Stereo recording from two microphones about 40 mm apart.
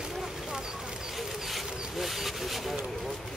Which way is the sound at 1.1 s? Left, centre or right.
Centre.